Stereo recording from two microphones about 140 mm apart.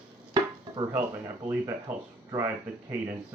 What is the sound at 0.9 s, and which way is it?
Speech, 10° right (ahead or behind).